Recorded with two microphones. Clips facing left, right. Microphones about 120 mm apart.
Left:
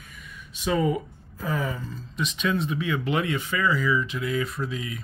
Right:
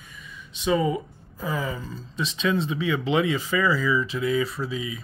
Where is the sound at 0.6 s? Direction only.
20° right (ahead or behind).